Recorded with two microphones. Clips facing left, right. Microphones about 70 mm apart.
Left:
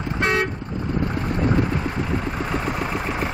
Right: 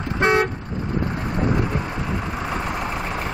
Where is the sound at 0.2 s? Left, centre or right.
Right.